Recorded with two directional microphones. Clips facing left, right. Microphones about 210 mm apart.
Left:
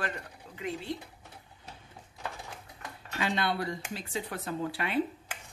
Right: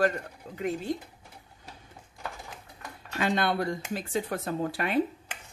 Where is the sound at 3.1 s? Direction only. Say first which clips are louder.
Right 4 dB; 50° right (ahead or behind).